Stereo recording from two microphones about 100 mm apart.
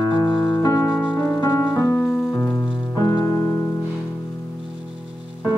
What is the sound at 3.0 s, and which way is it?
Music, 40° left (ahead or behind).